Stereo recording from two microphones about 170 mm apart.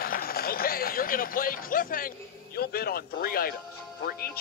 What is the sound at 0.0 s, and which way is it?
Speech, 60° left (ahead or behind).